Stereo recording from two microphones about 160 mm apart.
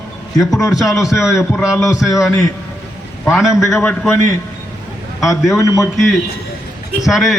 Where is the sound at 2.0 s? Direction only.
20° left (ahead or behind).